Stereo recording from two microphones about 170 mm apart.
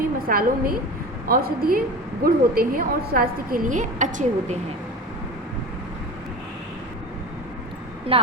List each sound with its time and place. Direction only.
0.0 s a woman's voice: 60° right (ahead or behind)
8.1 s speech: 35° right (ahead or behind)